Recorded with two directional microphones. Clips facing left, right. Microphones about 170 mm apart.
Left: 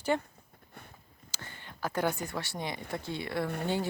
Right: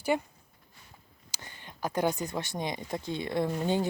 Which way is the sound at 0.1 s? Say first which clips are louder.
Right 1 dB; 10° right (ahead or behind).